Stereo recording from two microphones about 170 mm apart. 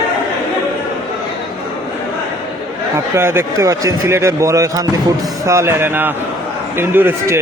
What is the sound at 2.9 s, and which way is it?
A man's voice, 15° right (ahead or behind).